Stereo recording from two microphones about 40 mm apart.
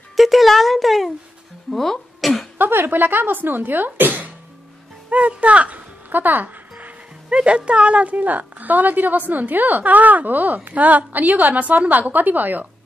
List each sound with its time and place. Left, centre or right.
0.1 s speech: centre
2.7 s speech: right
5.1 s speech: right
6.0 s a woman's voice: right
7.2 s a woman's voice: right